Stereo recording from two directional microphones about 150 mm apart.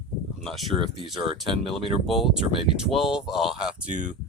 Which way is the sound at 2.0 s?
Centre (ahead or behind).